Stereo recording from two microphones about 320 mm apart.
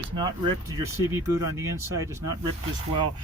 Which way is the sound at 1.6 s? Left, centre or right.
Centre.